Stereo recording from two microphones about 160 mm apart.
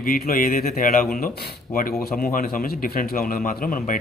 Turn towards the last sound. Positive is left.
turn(degrees=60)  # may be behind; listen again after turning